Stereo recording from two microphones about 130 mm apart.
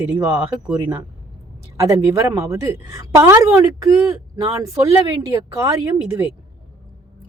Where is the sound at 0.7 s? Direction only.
15° right (ahead or behind).